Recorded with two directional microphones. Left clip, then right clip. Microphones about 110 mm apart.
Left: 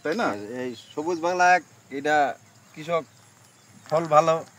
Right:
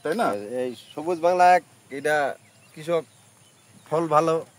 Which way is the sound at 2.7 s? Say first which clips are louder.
Right 1 dB; 90° right.